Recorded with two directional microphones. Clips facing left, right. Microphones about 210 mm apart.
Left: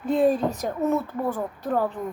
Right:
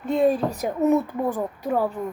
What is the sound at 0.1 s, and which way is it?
Speech, centre (ahead or behind).